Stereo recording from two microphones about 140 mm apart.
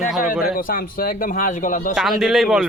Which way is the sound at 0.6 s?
85° left.